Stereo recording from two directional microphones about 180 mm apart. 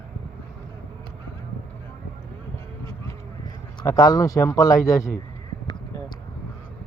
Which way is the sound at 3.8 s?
20° left (ahead or behind).